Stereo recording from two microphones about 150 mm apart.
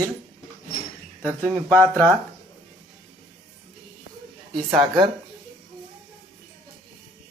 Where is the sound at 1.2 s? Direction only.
20° right (ahead or behind).